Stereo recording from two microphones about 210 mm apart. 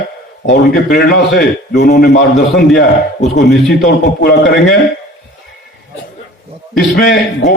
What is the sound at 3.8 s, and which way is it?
Speech, 50° left (ahead or behind).